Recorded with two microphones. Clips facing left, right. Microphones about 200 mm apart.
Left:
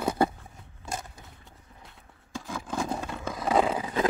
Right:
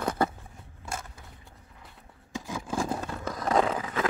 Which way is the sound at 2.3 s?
10° right (ahead or behind).